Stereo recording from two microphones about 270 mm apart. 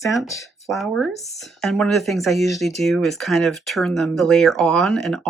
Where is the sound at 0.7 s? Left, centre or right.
Centre.